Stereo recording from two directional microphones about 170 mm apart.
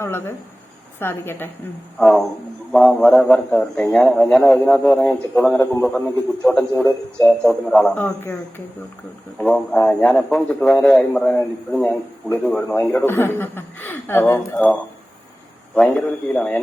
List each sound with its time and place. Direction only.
0.0 s a man's voice: 15° left (ahead or behind)
2.0 s speech: centre (ahead or behind)
6.8 s speech: 20° left (ahead or behind)
7.4 s a man's voice: 5° left (ahead or behind)